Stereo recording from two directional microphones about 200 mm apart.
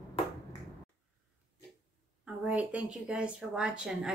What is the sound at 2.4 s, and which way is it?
Speech, 5° right (ahead or behind).